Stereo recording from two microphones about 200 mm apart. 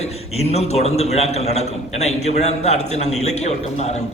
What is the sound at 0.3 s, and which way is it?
A man's voice, 30° left (ahead or behind).